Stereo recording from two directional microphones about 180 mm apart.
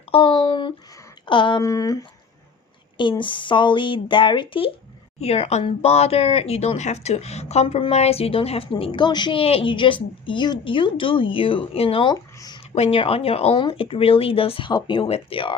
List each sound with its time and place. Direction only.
0.1 s speech: 30° left (ahead or behind)